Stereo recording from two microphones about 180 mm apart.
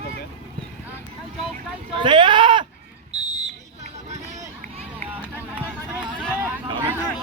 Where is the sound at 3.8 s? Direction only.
40° right (ahead or behind).